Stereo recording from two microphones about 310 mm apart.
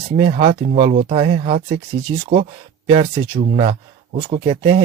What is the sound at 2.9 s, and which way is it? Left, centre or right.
A man's voice, centre.